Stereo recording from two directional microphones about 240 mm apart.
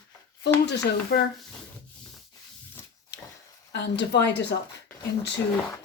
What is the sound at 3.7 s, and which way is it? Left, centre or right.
Speech, left.